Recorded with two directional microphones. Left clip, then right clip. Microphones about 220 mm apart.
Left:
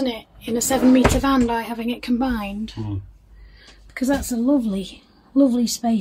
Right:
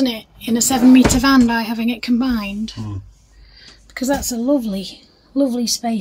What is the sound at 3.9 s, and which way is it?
A woman's voice, 10° right (ahead or behind).